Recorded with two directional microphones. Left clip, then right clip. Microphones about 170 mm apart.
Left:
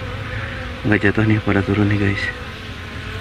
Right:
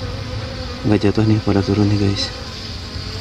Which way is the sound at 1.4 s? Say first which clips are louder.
Right 1 dB; 10° right (ahead or behind).